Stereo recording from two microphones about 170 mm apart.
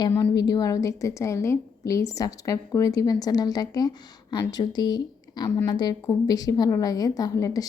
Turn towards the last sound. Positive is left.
turn(degrees=20)  # may be behind; listen again after turning